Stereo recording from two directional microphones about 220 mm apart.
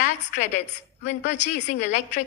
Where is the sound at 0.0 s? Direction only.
35° left (ahead or behind).